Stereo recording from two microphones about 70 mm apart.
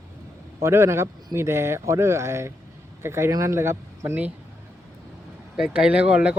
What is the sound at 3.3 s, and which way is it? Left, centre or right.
Speech, right.